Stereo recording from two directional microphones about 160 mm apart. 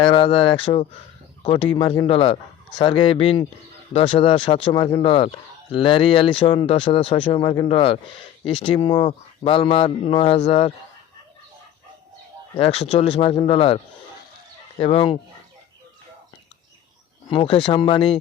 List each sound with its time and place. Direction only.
0.0 s speech: 35° left (ahead or behind)
12.5 s speech: 40° left (ahead or behind)
14.8 s speech: 35° left (ahead or behind)
17.2 s speech: 35° left (ahead or behind)